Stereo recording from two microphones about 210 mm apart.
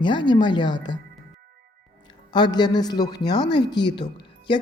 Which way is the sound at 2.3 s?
20° left (ahead or behind).